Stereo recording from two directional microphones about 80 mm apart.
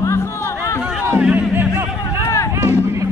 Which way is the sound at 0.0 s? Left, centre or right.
Left.